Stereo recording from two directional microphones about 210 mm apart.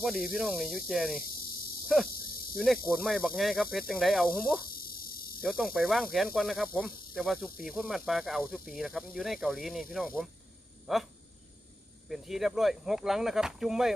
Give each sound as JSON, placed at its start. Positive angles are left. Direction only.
{"t": 0.0, "sound": "speech", "side_deg": 0}
{"t": 4.7, "sound": "cricket", "side_deg": 45}
{"t": 5.4, "sound": "speech", "side_deg": 0}
{"t": 12.0, "sound": "speech", "side_deg": 0}